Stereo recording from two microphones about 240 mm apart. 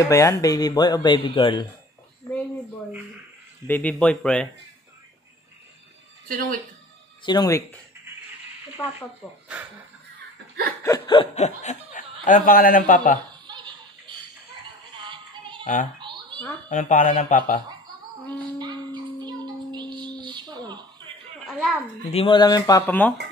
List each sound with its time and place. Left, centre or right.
0.1 s speech: centre
3.6 s speech: centre
6.2 s speech: right
7.2 s speech: centre
8.8 s speech: centre
10.8 s speech: centre; by 13.2 s left
13.3 s music: centre
15.6 s speech: left
16.0 s a sound: centre
16.6 s speech: left
18.4 s a sound: centre
21.5 s a sound: centre
22.1 s speech: left